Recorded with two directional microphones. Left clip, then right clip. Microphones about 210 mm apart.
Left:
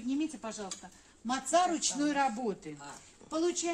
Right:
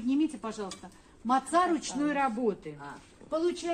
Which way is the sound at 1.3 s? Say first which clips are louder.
Right 3 dB; 50° left (ahead or behind).